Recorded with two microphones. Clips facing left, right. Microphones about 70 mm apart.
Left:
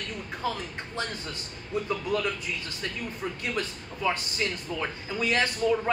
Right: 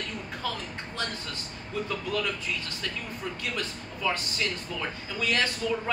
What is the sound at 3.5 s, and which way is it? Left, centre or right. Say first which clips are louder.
Speech: left 2 dB; left.